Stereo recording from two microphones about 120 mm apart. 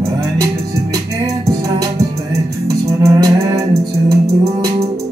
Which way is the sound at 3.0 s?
25° right (ahead or behind).